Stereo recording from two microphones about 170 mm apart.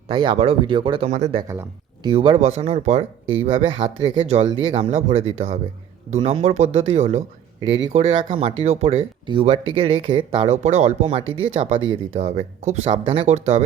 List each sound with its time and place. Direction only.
0.1 s speech: 30° right (ahead or behind)
1.1 s speech: 40° right (ahead or behind)
1.4 s speech: 15° right (ahead or behind)
2.0 s speech: 30° right (ahead or behind)
7.6 s speech: 90° right
7.9 s speech: 35° right (ahead or behind)